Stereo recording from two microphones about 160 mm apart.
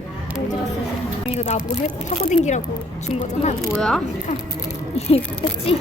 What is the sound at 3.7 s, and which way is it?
Speech, 5° left (ahead or behind).